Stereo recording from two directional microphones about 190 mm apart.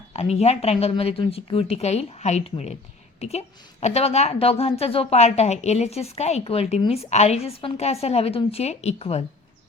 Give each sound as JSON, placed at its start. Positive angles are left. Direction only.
{"t": 0.1, "sound": "a woman's voice", "side_deg": 35}